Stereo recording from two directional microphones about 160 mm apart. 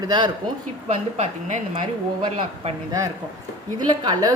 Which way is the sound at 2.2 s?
30° right (ahead or behind).